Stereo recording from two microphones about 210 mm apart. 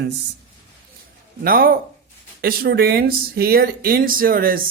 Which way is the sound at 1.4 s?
45° right (ahead or behind).